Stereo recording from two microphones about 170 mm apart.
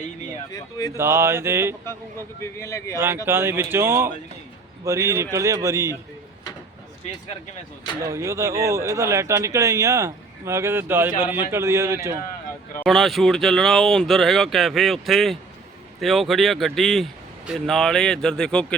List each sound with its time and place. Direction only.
0.5 s speech: 20° left (ahead or behind)
0.9 s speech: 15° right (ahead or behind)
2.4 s speech: 15° left (ahead or behind)
3.2 s speech: 15° right (ahead or behind)
8.0 s speech: 15° right (ahead or behind)
12.8 s speech: centre (ahead or behind)